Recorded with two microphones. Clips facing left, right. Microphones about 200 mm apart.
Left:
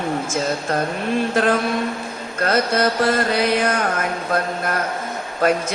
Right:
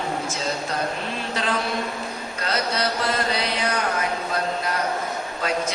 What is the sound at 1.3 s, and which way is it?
Mantra, 50° left (ahead or behind).